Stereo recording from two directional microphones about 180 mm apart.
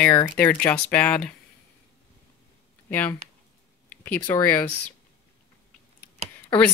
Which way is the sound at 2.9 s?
10° left (ahead or behind).